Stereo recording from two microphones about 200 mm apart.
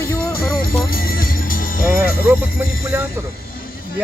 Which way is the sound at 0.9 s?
45° left (ahead or behind).